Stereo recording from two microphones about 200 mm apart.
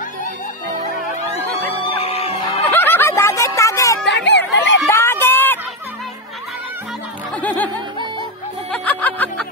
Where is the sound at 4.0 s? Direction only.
60° left (ahead or behind).